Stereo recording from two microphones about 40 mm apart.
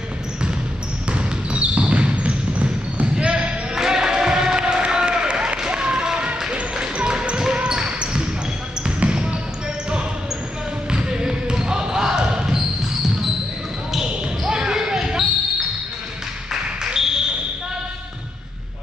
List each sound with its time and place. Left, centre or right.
1.1 s basketball bounce: right
3.7 s music: centre
7.5 s basketball bounce: right
10.9 s basketball bounce: right
14.4 s basketball bounce: centre
16.8 s a sound: centre